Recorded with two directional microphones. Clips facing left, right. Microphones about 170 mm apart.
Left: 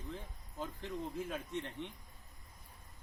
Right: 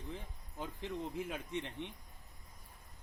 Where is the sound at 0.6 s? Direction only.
15° right (ahead or behind).